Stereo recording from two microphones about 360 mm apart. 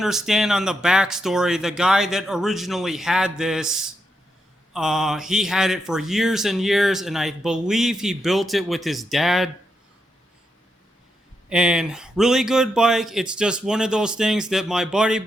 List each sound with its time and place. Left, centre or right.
0.0 s speech: centre
11.4 s speech: centre